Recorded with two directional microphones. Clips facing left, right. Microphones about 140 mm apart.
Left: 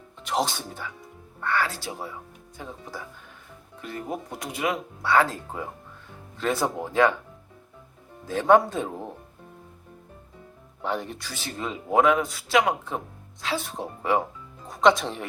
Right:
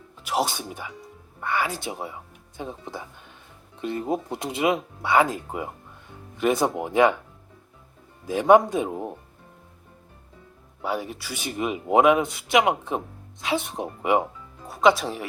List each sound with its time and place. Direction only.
0.2 s speech: 5° right (ahead or behind)
8.3 s speech: 15° right (ahead or behind)
10.8 s speech: 5° right (ahead or behind)
14.7 s speech: 5° right (ahead or behind)